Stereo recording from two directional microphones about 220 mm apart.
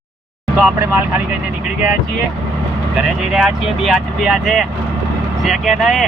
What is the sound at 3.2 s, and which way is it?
Speech, centre (ahead or behind).